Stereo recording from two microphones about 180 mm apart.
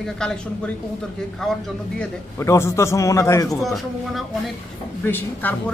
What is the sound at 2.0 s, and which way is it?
A man's voice, 15° left (ahead or behind).